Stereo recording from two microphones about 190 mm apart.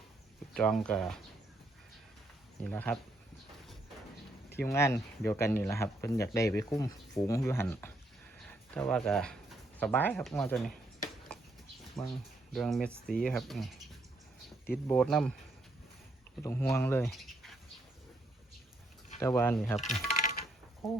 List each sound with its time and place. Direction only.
0.5 s speech: 5° left (ahead or behind)
2.6 s speech: 5° left (ahead or behind)
4.6 s speech: 15° left (ahead or behind)
12.0 s speech: centre (ahead or behind)
14.8 s speech: 5° left (ahead or behind)
16.4 s speech: 15° left (ahead or behind)
17.1 s bird: centre (ahead or behind)
19.2 s speech: 15° left (ahead or behind)
19.7 s speech: centre (ahead or behind)
20.2 s a sound: 50° left (ahead or behind)
20.8 s speech: centre (ahead or behind)